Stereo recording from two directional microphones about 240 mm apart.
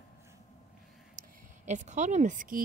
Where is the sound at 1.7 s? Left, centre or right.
Right.